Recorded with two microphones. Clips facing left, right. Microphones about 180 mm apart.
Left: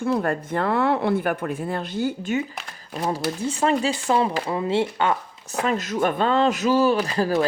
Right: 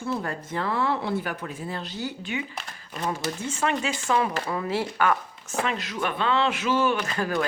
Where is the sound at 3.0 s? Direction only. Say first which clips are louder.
Left 4 dB; 35° left (ahead or behind).